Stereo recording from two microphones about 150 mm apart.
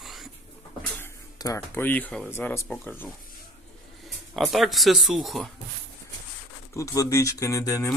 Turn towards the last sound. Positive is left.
turn(degrees=20)  # may be behind; listen again after turning